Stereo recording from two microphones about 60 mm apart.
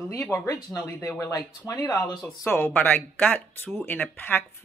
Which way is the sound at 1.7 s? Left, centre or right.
Left.